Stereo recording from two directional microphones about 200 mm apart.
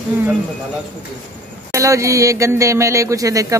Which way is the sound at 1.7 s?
15° right (ahead or behind).